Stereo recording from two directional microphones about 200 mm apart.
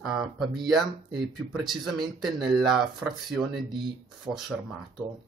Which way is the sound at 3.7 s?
25° right (ahead or behind).